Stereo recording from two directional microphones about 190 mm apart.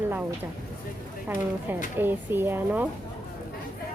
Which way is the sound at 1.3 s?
10° right (ahead or behind).